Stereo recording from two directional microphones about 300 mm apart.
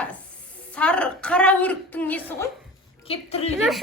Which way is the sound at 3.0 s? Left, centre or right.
Centre.